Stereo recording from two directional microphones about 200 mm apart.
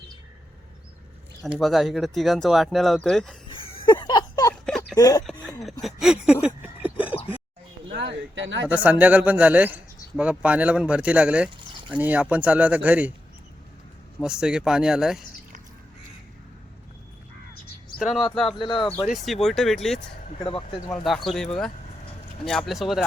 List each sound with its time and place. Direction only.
1.5 s speech: centre (ahead or behind)
3.5 s a sound: 25° left (ahead or behind)
4.6 s a sound: 5° left (ahead or behind)
4.9 s speech: 20° left (ahead or behind)
5.8 s a sound: 5° right (ahead or behind)
7.1 s a sound: 30° left (ahead or behind)
7.9 s speech: 65° right (ahead or behind)
8.6 s speech: 10° right (ahead or behind)
14.2 s speech: 5° right (ahead or behind)
18.3 s speech: centre (ahead or behind)
18.6 s speech: 25° left (ahead or behind)
19.0 s speech: centre (ahead or behind)
20.4 s speech: 25° left (ahead or behind)
20.9 s speech: centre (ahead or behind)